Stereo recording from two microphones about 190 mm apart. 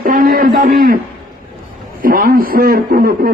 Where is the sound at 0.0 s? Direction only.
45° right (ahead or behind).